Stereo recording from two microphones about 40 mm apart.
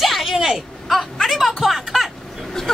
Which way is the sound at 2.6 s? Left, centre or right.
Centre.